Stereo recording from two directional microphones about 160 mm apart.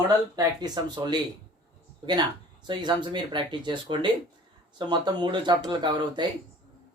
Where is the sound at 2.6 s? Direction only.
30° right (ahead or behind).